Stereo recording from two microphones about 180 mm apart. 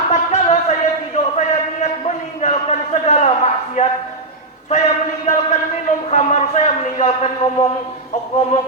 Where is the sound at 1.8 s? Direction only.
35° left (ahead or behind).